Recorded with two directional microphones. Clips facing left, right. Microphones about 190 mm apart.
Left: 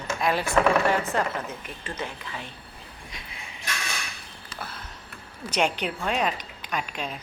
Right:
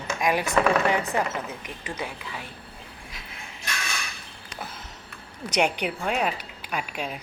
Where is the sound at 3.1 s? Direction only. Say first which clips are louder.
Even; 5° right (ahead or behind).